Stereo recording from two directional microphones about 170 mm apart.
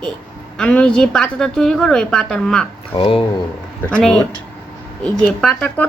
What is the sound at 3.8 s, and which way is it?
A woman's voice, 5° left (ahead or behind).